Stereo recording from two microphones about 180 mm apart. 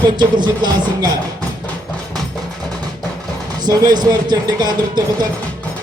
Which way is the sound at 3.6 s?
20° right (ahead or behind).